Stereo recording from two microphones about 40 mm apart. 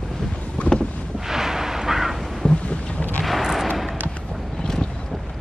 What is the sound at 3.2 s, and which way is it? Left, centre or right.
Artillery fire, centre.